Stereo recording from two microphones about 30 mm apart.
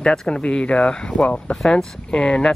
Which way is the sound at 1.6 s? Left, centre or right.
Centre.